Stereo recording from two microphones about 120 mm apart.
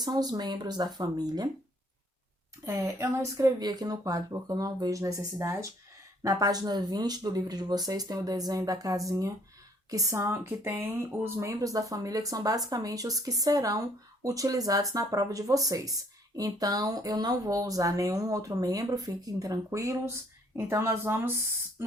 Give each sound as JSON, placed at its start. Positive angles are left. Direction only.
{"t": 0.0, "sound": "speech", "side_deg": -35}
{"t": 2.6, "sound": "a woman's voice", "side_deg": -25}